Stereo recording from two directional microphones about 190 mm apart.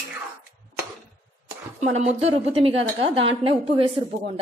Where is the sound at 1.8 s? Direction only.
35° right (ahead or behind).